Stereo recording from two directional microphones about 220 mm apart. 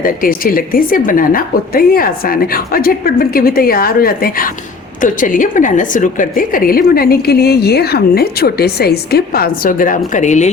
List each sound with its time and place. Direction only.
0.0 s a woman's voice: 40° left (ahead or behind)